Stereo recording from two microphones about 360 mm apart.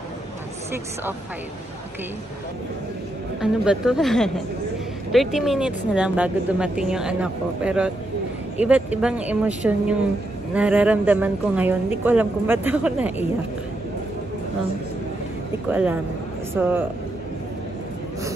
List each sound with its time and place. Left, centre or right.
3.3 s speech: centre
15.7 s speech: centre